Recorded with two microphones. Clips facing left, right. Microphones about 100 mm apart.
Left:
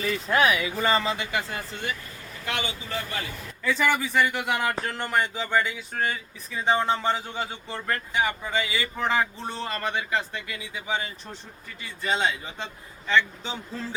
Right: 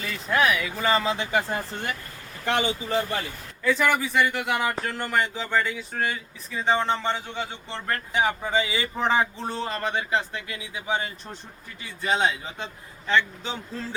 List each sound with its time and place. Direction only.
0.0 s speech: 5° left (ahead or behind)
1.3 s speech: 35° right (ahead or behind)
2.4 s speech: 35° right (ahead or behind)
3.6 s speech: centre (ahead or behind)
8.4 s speech: 25° right (ahead or behind)
9.1 s speech: 10° right (ahead or behind)